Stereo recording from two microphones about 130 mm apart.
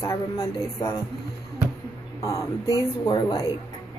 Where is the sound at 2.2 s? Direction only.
25° left (ahead or behind).